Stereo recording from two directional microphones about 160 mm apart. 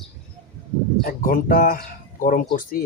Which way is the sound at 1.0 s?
65° left (ahead or behind).